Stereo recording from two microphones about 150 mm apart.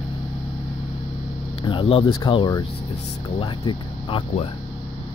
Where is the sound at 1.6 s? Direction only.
35° left (ahead or behind).